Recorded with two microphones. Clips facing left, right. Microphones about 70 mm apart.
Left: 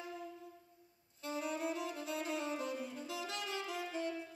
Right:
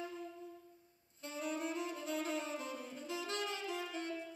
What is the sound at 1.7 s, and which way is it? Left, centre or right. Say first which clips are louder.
Saxophone: left 1 dB; right.